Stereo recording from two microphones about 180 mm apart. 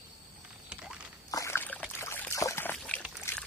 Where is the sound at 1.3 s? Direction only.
15° left (ahead or behind).